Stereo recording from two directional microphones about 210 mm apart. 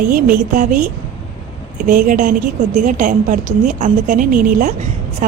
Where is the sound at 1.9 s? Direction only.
40° right (ahead or behind).